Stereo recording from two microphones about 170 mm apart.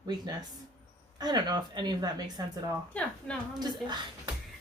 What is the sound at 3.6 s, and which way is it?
Speech, 25° right (ahead or behind).